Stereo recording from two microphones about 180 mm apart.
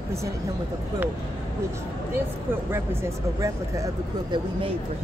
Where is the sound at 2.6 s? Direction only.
15° right (ahead or behind).